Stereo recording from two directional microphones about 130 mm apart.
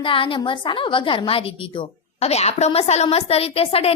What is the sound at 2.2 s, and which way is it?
A woman's voice, 55° left (ahead or behind).